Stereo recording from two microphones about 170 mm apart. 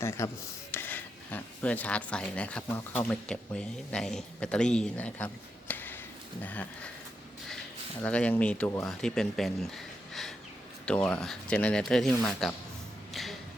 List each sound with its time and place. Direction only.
0.0 s speech: 15° left (ahead or behind)
8.0 s speech: 5° left (ahead or behind)
13.2 s a sound: centre (ahead or behind)